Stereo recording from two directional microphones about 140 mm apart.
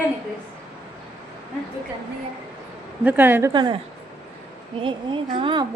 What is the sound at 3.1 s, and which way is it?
Speech, 15° right (ahead or behind).